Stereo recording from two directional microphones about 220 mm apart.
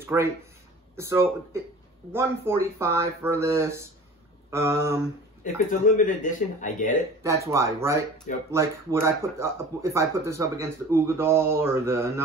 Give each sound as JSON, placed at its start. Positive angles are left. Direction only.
{"t": 0.0, "sound": "speech", "side_deg": -10}
{"t": 5.4, "sound": "speech", "side_deg": 35}
{"t": 7.4, "sound": "speech", "side_deg": -15}
{"t": 8.3, "sound": "speech", "side_deg": 35}
{"t": 9.0, "sound": "speech", "side_deg": -15}